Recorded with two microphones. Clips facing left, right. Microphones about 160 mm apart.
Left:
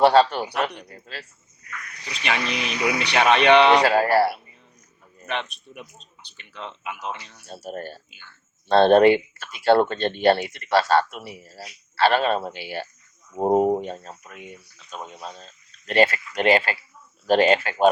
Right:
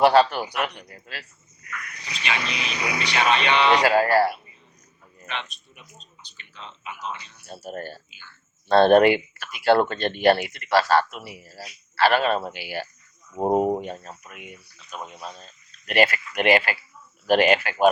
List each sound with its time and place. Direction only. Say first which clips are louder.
0.0 s speech: left 1 dB; 30° left (ahead or behind)
2.2 s speech: left 3 dB; 55° left (ahead or behind)
3.8 s speech: even; 30° left (ahead or behind)
5.2 s speech: left 5 dB; 55° left (ahead or behind)
7.4 s speech: left 1 dB; 25° left (ahead or behind)
13.3 s speech: left 2 dB; 5° left (ahead or behind)
13.8 s speech: left 1 dB; 30° left (ahead or behind)